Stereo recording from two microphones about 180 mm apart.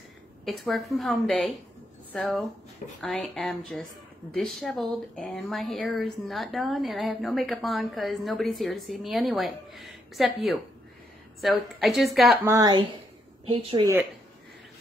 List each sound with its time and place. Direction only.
0.5 s speech: centre (ahead or behind)
12.4 s speech: 20° right (ahead or behind)